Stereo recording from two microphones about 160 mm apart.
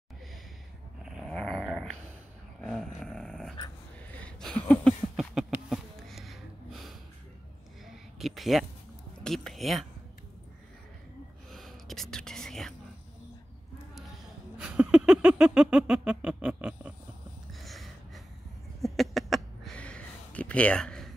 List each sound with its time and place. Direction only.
1.0 s dog: 5° left (ahead or behind)
4.2 s a sound: 5° left (ahead or behind)
9.2 s speech: centre (ahead or behind)
11.5 s whispering: centre (ahead or behind)
14.6 s music: 10° right (ahead or behind)
17.6 s a sound: centre (ahead or behind)